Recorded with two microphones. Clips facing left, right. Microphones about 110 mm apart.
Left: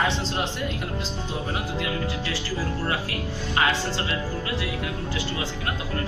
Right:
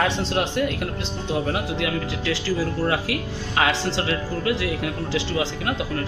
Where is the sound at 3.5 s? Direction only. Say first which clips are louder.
Right 3 dB; 90° right.